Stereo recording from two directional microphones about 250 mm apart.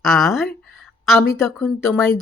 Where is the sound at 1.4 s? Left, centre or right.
Centre.